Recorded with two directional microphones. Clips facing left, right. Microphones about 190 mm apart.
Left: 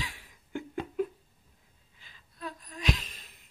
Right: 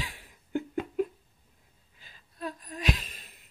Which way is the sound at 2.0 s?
45° right (ahead or behind).